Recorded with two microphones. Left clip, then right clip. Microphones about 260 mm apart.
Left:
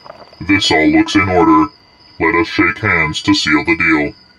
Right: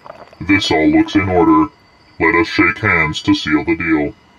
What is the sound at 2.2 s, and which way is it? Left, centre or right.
Speech, centre.